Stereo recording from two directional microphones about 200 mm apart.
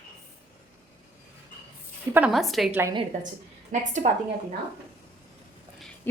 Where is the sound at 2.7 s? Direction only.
10° right (ahead or behind).